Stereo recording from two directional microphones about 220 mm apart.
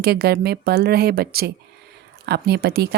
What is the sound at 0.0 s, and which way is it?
A woman's voice, 45° right (ahead or behind).